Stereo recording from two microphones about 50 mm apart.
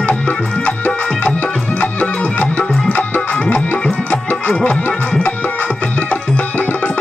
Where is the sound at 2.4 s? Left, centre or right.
Left.